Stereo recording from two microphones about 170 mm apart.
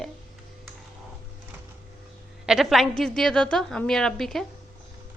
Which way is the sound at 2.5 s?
Centre (ahead or behind).